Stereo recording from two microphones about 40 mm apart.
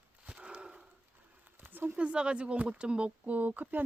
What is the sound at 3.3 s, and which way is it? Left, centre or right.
Speech, right.